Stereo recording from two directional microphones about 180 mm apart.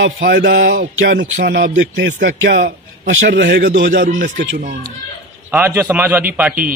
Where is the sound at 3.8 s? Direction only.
85° right.